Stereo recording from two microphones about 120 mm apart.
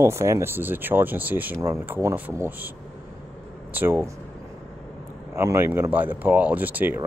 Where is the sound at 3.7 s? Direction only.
15° right (ahead or behind).